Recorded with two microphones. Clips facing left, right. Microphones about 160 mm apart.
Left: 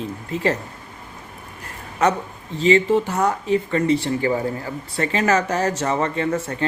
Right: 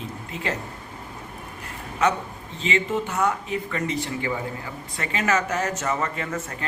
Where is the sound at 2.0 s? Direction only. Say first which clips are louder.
Left 3 dB; 40° left (ahead or behind).